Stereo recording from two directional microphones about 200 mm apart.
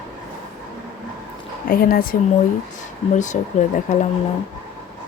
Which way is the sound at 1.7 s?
45° left (ahead or behind).